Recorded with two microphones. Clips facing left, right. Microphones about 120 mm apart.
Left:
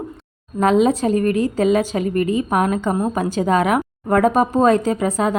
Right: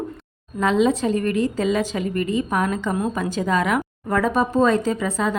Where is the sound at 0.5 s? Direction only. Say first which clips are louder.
Left 3 dB; 45° left (ahead or behind).